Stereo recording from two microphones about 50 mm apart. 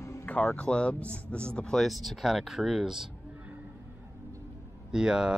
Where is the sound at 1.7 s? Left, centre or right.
Centre.